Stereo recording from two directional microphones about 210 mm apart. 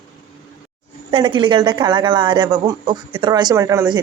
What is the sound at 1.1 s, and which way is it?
A woman's voice, 25° right (ahead or behind).